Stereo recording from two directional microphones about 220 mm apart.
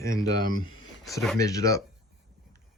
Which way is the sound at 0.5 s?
65° left (ahead or behind).